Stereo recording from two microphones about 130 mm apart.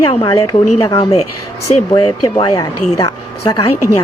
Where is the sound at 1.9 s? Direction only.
35° left (ahead or behind).